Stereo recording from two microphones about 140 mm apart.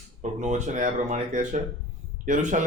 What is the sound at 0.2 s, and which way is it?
Speech, 55° right (ahead or behind).